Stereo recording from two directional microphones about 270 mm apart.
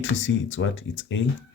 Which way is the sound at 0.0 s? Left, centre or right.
Left.